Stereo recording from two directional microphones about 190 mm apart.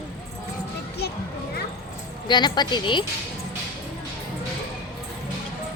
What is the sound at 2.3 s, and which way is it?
Speech, 25° left (ahead or behind).